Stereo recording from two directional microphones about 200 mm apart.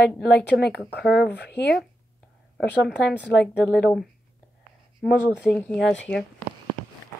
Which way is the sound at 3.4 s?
5° left (ahead or behind).